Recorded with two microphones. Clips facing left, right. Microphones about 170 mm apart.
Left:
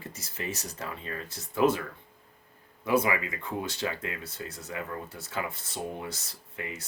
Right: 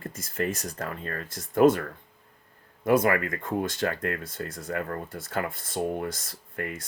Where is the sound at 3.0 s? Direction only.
50° right (ahead or behind).